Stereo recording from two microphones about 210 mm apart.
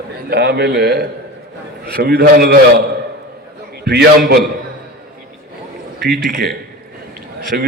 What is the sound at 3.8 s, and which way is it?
Speech, 50° right (ahead or behind).